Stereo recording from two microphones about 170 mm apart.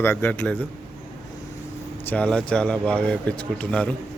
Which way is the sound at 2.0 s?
5° left (ahead or behind).